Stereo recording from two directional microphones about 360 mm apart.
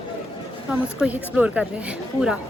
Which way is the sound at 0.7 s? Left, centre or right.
Centre.